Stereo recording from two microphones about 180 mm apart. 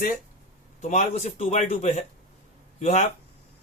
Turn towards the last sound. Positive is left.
turn(degrees=40)  # may be behind; listen again after turning